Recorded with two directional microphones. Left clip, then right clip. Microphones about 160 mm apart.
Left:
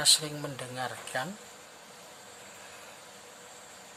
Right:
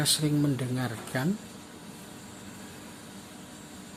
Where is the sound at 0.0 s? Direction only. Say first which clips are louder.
Left 1 dB; 10° left (ahead or behind).